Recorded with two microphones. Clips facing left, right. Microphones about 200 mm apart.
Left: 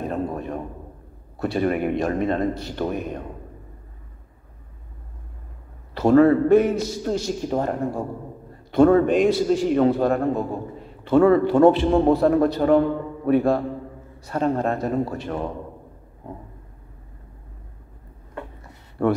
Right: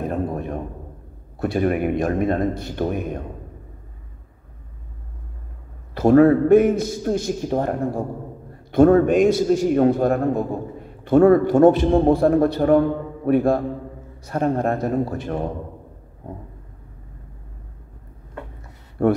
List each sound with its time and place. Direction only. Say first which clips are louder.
0.1 s a sound: right 2 dB; 50° right (ahead or behind)
1.4 s a man's voice: right 2 dB; 50° right (ahead or behind)
5.9 s a man's voice: right 2 dB; 50° right (ahead or behind)